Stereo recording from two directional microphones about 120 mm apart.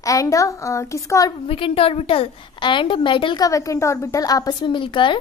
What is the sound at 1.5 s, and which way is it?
A woman's voice, 50° left (ahead or behind).